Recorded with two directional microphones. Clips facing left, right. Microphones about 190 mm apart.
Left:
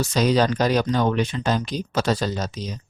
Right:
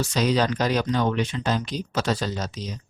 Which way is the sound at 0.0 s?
45° left (ahead or behind).